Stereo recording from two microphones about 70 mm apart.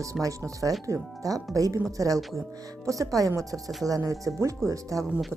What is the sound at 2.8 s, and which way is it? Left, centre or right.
Speech, right.